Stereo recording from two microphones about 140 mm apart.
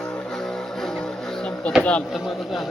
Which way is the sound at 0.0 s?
5° left (ahead or behind).